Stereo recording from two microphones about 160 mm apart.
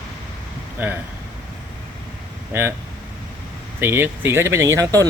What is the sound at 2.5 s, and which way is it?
Speech, 15° right (ahead or behind).